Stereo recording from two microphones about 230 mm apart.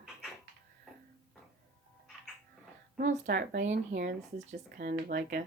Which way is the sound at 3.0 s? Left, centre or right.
Right.